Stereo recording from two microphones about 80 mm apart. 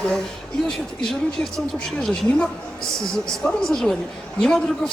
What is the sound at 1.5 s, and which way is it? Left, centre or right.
Speech, centre.